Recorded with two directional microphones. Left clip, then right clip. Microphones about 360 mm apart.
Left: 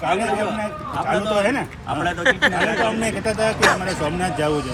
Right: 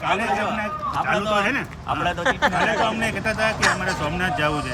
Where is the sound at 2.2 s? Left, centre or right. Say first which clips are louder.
Left 3 dB; centre.